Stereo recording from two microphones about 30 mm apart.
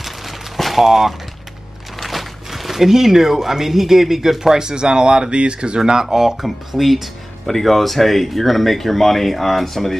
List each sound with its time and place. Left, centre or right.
0.6 s a sound: centre
0.8 s speech: centre
2.0 s a sound: centre
2.9 s speech: centre
4.6 s speech: right
6.0 s speech: centre
6.4 s speech: centre
7.4 s speech: centre